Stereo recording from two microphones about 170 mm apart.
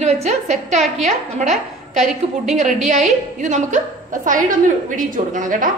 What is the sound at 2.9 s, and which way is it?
A woman's voice, 45° right (ahead or behind).